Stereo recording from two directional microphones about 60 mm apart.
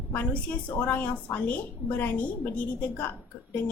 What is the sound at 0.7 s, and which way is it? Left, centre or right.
A woman's voice, left.